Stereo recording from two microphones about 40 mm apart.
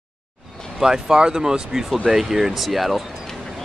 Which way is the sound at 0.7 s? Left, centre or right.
Centre.